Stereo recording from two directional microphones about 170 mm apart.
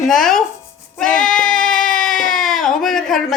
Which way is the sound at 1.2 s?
5° left (ahead or behind).